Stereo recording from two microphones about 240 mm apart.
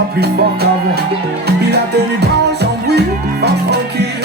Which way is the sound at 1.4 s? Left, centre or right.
Right.